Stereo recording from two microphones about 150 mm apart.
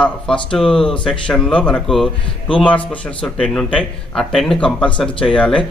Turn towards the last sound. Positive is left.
turn(degrees=5)  # may be behind; listen again after turning